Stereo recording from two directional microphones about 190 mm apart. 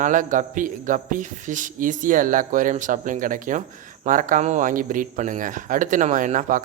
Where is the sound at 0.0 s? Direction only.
40° right (ahead or behind).